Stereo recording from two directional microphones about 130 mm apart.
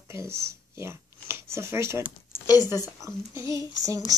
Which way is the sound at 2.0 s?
25° left (ahead or behind).